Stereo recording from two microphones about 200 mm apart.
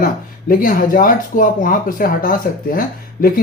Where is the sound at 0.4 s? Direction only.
45° left (ahead or behind).